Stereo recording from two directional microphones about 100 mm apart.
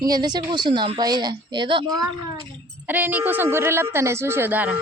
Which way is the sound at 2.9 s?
20° right (ahead or behind).